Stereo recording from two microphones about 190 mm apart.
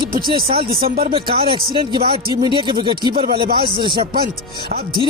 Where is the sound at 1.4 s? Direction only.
25° right (ahead or behind).